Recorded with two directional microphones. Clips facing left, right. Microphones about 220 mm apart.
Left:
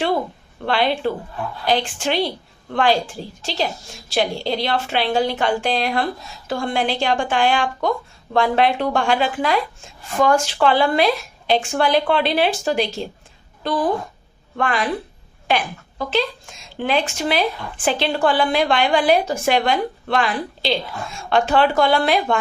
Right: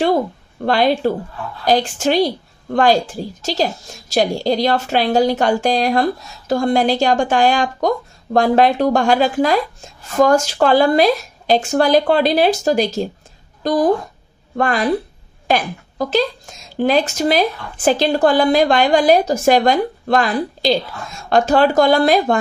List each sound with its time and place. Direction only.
0.6 s a woman's voice: 40° right (ahead or behind)